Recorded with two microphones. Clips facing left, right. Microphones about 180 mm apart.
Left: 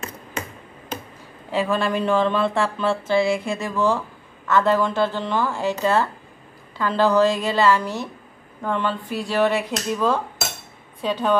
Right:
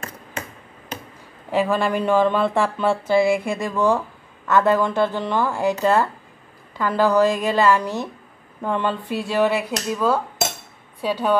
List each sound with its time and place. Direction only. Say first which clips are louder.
1.5 s speech: right 2 dB; 10° right (ahead or behind)